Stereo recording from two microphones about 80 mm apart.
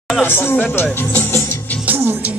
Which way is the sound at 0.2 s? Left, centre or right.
Left.